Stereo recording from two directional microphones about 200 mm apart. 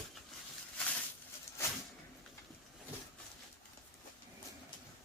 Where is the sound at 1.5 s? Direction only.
15° left (ahead or behind).